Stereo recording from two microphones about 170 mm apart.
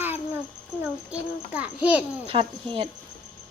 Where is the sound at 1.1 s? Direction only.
10° right (ahead or behind).